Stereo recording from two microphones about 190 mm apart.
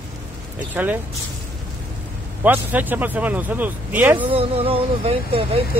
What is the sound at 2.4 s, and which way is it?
Speech, 10° right (ahead or behind).